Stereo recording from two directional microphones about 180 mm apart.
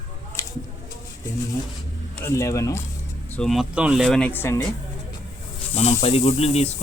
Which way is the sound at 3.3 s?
Centre (ahead or behind).